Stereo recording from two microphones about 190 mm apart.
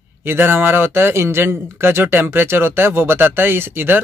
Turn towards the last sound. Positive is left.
turn(degrees=-10)  # may be behind; listen again after turning